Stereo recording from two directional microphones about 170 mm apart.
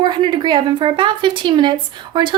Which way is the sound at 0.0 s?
30° right (ahead or behind).